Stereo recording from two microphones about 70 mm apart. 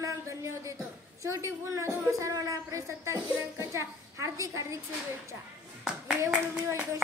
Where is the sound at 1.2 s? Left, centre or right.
Right.